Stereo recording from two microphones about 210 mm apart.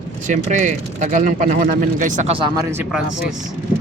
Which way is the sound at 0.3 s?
35° right (ahead or behind).